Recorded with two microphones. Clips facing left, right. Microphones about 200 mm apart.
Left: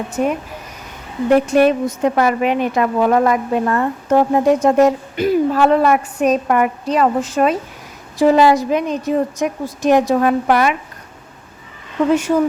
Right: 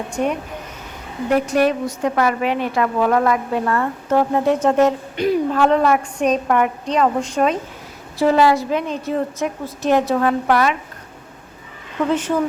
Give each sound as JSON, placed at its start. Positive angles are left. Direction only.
{"t": 0.1, "sound": "speech", "side_deg": 5}
{"t": 1.3, "sound": "a woman's voice", "side_deg": 25}
{"t": 8.2, "sound": "a woman's voice", "side_deg": 15}